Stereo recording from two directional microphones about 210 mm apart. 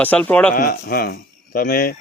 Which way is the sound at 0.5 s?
45° left (ahead or behind).